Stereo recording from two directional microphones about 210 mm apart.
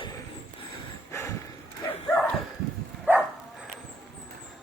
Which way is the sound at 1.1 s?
15° left (ahead or behind).